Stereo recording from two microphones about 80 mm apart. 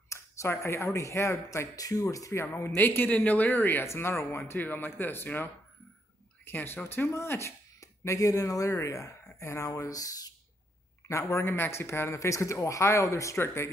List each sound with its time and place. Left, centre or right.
0.1 s speech: left
2.4 s speech: left
9.8 s speech: left
11.1 s speech: left